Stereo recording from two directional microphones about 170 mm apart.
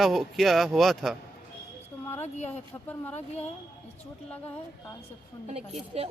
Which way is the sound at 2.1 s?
40° left (ahead or behind).